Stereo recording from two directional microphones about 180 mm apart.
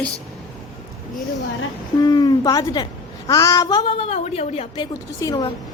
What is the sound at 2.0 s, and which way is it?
A woman's voice, 20° left (ahead or behind).